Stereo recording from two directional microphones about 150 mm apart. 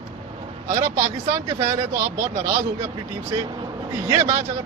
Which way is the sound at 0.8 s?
20° right (ahead or behind).